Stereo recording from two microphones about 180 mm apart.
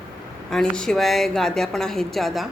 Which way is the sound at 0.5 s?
5° left (ahead or behind).